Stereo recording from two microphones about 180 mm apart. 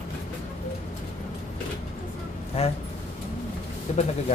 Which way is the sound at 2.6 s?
35° left (ahead or behind).